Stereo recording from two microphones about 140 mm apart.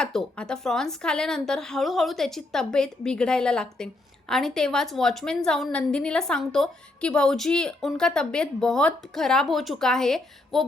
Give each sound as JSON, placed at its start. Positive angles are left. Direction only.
{"t": 0.0, "sound": "a woman's voice", "side_deg": 5}